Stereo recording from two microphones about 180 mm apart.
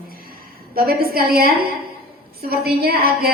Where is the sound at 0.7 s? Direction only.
55° right (ahead or behind).